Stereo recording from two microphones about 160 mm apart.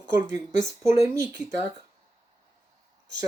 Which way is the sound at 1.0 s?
20° right (ahead or behind).